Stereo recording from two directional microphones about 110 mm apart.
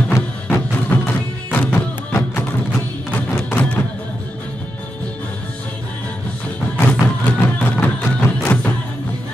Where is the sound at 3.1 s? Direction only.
15° left (ahead or behind).